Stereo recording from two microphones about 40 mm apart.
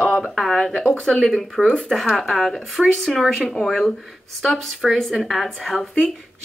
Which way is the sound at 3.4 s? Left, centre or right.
Centre.